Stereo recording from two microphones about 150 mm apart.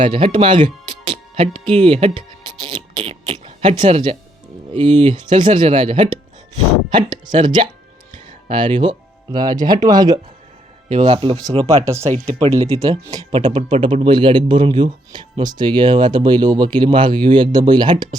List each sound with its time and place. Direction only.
0.0 s speech: 35° right (ahead or behind)
2.5 s music: 30° right (ahead or behind)
3.2 s music: 40° right (ahead or behind)
4.7 s speech: 30° right (ahead or behind)
10.8 s speech: 45° right (ahead or behind)
11.7 s speech: 20° right (ahead or behind)
12.4 s speech: 40° right (ahead or behind)
13.3 s speech: 30° right (ahead or behind)